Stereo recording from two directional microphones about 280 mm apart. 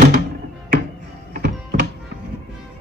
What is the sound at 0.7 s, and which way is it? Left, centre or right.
Music, right.